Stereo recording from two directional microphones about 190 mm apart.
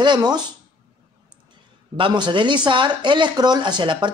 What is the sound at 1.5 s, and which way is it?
Speech, 25° right (ahead or behind).